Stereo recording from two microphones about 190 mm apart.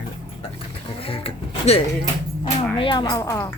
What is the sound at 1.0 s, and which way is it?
Speech, 30° left (ahead or behind).